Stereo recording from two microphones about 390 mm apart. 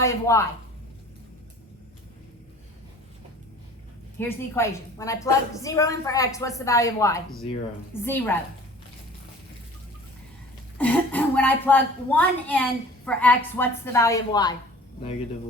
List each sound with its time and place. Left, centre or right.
0.0 s a woman's voice: centre
4.2 s a woman's voice: centre
10.8 s speech: centre